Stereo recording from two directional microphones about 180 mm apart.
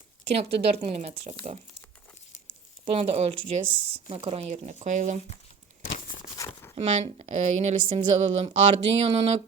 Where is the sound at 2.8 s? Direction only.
35° right (ahead or behind).